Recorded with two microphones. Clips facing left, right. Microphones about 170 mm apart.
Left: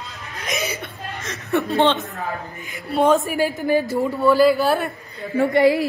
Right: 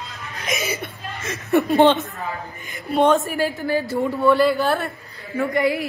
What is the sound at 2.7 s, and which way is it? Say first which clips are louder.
Speech: even; centre (ahead or behind).